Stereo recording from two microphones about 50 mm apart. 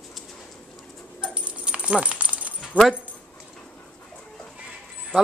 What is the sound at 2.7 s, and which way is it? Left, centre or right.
Speech, right.